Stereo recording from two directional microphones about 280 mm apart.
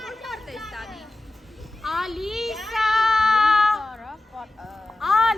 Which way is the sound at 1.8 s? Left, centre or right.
Centre.